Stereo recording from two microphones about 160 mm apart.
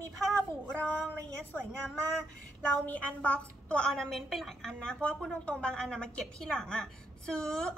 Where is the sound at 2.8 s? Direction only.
10° left (ahead or behind).